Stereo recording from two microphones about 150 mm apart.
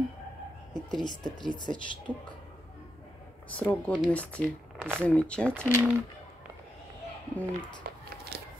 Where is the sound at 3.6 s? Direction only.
10° left (ahead or behind).